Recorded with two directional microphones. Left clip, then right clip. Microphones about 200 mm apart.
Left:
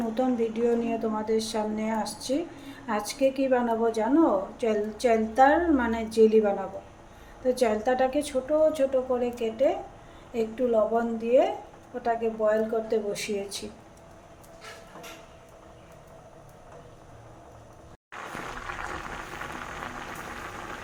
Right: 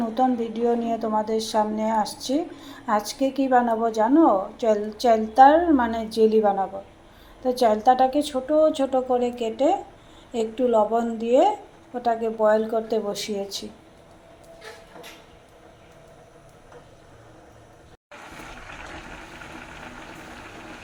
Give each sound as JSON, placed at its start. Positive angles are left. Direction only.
{"t": 0.1, "sound": "a woman's voice", "side_deg": 0}